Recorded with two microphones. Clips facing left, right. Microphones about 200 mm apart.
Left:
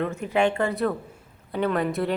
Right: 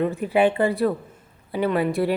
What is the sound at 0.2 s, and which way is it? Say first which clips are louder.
Speech: right 3 dB; 5° right (ahead or behind).